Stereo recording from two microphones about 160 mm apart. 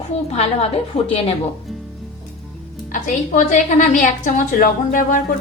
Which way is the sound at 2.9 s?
55° left (ahead or behind).